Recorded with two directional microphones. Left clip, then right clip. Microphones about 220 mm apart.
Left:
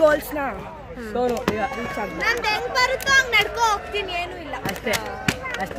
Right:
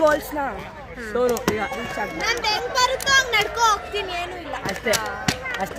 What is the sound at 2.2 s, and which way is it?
Speech, centre (ahead or behind).